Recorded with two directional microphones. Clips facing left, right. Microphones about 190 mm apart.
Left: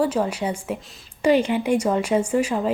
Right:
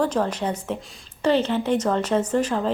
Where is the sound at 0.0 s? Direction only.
10° left (ahead or behind).